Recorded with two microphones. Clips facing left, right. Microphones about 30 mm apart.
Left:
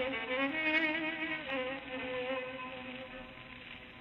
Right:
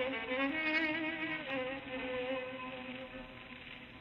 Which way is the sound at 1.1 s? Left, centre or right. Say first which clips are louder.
Left 1 dB; left.